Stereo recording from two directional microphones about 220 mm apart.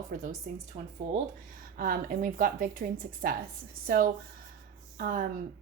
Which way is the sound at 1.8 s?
40° right (ahead or behind).